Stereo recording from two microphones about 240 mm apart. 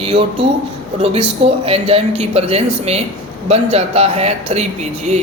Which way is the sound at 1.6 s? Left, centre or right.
Right.